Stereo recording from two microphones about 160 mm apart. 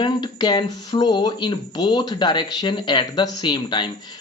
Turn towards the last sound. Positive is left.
turn(degrees=30)  # may be behind; listen again after turning